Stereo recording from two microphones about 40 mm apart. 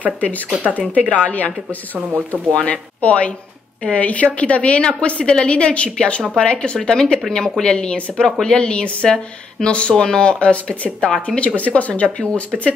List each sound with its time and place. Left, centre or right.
0.7 s speech: right
1.1 s a woman's voice: left
2.0 s speech: right
2.6 s a woman's voice: left
6.9 s a woman's voice: centre; by 12.4 s left